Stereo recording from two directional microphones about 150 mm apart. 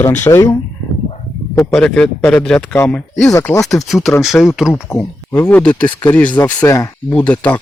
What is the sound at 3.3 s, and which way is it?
Speech, 20° left (ahead or behind).